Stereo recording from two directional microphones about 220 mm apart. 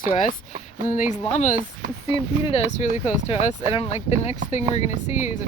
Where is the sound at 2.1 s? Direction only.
25° left (ahead or behind).